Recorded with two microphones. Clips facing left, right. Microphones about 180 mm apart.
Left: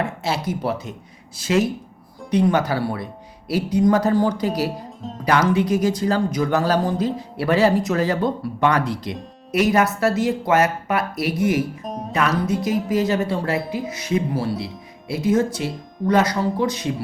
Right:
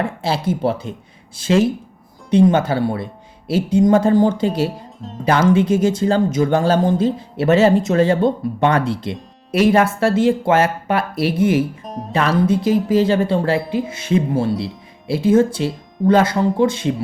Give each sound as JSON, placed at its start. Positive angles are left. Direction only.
{"t": 0.0, "sound": "speech", "side_deg": -30}
{"t": 11.9, "sound": "speech", "side_deg": 0}
{"t": 12.1, "sound": "speech", "side_deg": -30}